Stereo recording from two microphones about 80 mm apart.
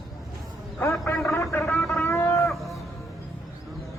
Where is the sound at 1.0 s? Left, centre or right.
Left.